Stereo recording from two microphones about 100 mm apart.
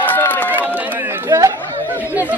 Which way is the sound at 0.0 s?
20° left (ahead or behind).